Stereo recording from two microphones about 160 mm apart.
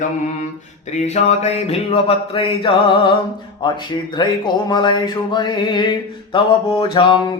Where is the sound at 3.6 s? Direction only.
30° left (ahead or behind).